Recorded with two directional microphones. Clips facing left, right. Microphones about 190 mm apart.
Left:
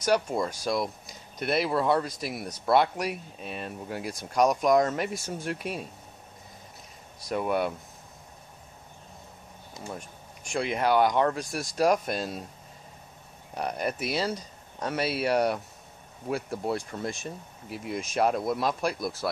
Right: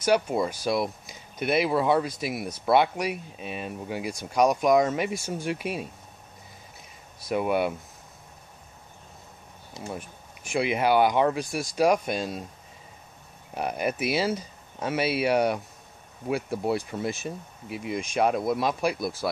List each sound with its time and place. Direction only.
0.0 s speech: centre (ahead or behind)
7.2 s speech: 5° right (ahead or behind)
9.8 s speech: 5° right (ahead or behind)
13.6 s speech: 5° right (ahead or behind)